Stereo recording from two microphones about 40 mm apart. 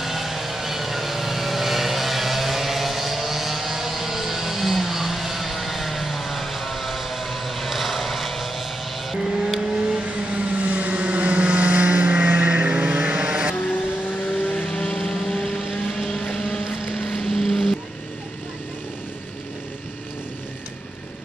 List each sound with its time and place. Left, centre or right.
0.0 s vehicle: centre
10.0 s vehicle: right
13.6 s vehicle: left
14.7 s a sound: left
16.0 s vehicle: left
17.3 s vehicle: centre